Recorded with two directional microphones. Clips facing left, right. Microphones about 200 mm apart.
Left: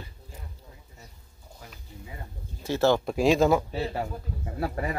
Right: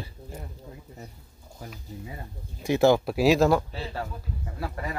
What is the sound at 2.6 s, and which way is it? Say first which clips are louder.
Speech: right 3 dB; 15° right (ahead or behind).